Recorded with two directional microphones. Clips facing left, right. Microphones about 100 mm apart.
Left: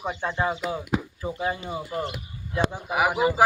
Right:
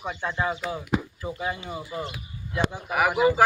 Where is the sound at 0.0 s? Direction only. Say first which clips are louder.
Left 2 dB; 25° left (ahead or behind).